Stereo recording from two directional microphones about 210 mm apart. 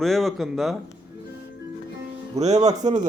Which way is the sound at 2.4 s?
30° right (ahead or behind).